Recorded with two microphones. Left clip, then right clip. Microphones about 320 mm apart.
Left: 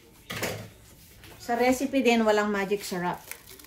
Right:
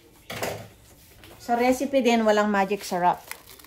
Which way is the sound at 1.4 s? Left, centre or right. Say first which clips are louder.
Right 2 dB; right.